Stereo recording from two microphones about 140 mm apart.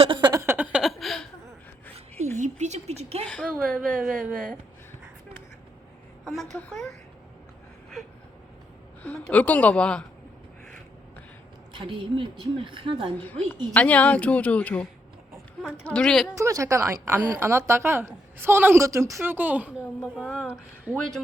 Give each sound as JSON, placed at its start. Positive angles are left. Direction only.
{"t": 0.0, "sound": "a sound", "side_deg": -35}
{"t": 0.3, "sound": "a sound", "side_deg": -15}
{"t": 2.4, "sound": "a woman's voice", "side_deg": -55}
{"t": 3.4, "sound": "a woman's voice", "side_deg": -5}
{"t": 6.2, "sound": "a woman's voice", "side_deg": 0}
{"t": 9.3, "sound": "a woman's voice", "side_deg": 10}
{"t": 11.7, "sound": "a woman's voice", "side_deg": -35}
{"t": 13.2, "sound": "a woman's voice", "side_deg": 10}
{"t": 16.4, "sound": "a woman's voice", "side_deg": -20}
{"t": 20.2, "sound": "a woman's voice", "side_deg": 5}
{"t": 20.9, "sound": "a woman's voice", "side_deg": -10}